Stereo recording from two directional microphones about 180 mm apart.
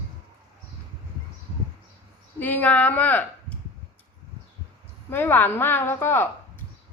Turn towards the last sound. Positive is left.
turn(degrees=15)  # may be behind; listen again after turning